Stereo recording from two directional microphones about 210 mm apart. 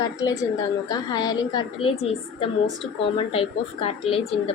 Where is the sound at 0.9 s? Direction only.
20° left (ahead or behind).